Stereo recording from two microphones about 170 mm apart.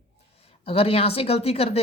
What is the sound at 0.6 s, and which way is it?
Speech, 35° left (ahead or behind).